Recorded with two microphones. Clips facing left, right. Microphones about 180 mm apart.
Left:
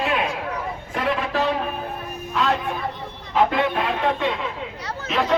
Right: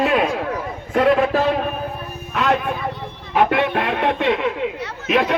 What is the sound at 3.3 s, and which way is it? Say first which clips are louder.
Speech: right 2 dB; 65° right (ahead or behind).